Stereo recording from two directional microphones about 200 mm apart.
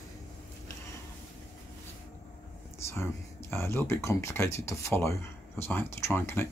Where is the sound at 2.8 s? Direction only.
15° left (ahead or behind).